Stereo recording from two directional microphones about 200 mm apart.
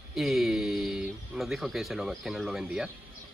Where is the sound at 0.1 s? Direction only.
Centre (ahead or behind).